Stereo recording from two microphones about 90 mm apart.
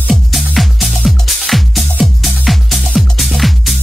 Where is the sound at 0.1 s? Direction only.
Centre (ahead or behind).